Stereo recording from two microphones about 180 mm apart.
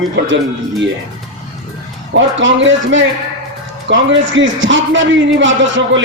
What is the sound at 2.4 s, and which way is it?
A man's voice, 90° right.